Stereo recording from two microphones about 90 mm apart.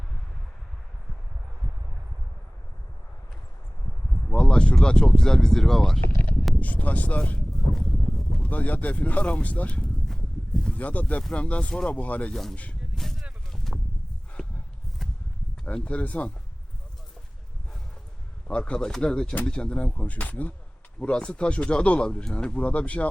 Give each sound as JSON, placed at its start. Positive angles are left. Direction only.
{"t": 4.1, "sound": "speech", "side_deg": 10}
{"t": 6.6, "sound": "speech", "side_deg": 15}
{"t": 7.5, "sound": "a sound", "side_deg": 5}
{"t": 8.4, "sound": "speech", "side_deg": 20}
{"t": 11.9, "sound": "speech", "side_deg": 15}
{"t": 12.3, "sound": "speech", "side_deg": 5}
{"t": 13.0, "sound": "a sound", "side_deg": 0}
{"t": 15.6, "sound": "speech", "side_deg": 15}
{"t": 18.4, "sound": "speech", "side_deg": 10}